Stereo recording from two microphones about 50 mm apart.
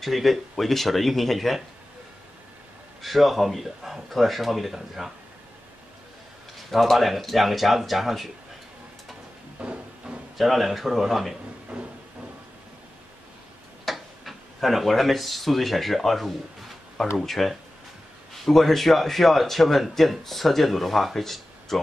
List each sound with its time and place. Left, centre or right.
0.0 s speech: centre
3.0 s speech: centre
6.7 s speech: centre
9.6 s a sound: right
10.3 s speech: centre
11.7 s a sound: centre
13.8 s speech: centre